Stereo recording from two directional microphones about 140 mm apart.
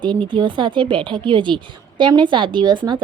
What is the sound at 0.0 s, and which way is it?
Speech, 35° right (ahead or behind).